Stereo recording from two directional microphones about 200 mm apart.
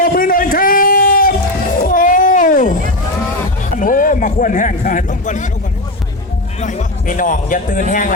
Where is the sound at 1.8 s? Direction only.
40° left (ahead or behind).